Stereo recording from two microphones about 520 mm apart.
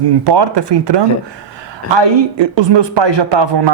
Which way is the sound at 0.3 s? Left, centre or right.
Right.